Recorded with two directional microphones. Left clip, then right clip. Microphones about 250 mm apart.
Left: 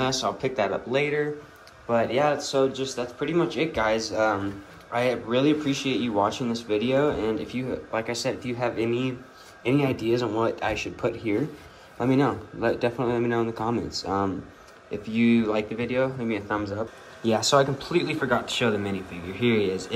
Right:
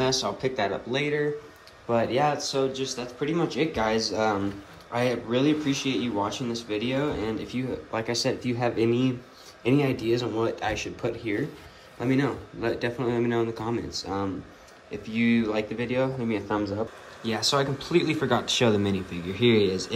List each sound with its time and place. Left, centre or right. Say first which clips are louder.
0.0 s speech: even; centre
17.2 s speech: left 4 dB; centre
17.8 s speech: even; centre